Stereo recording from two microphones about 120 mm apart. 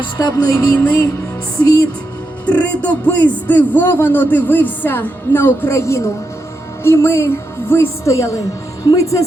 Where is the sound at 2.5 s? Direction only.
10° left (ahead or behind).